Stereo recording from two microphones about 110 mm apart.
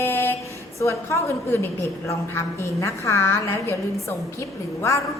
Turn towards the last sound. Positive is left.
turn(degrees=25)  # may be behind; listen again after turning